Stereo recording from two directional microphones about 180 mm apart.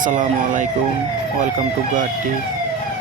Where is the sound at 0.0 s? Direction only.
45° right (ahead or behind).